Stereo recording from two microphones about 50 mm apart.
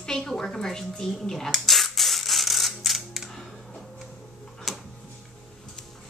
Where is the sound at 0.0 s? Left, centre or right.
Centre.